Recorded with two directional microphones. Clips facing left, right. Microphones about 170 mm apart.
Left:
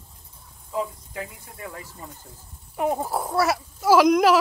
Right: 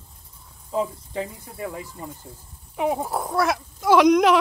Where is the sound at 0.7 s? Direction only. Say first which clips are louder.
Right 3 dB; 30° right (ahead or behind).